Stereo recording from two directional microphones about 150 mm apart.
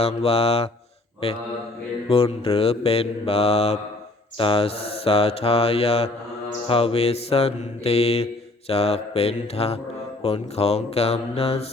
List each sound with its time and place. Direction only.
0.0 s mantra: 40° left (ahead or behind)
2.0 s mantra: 40° left (ahead or behind)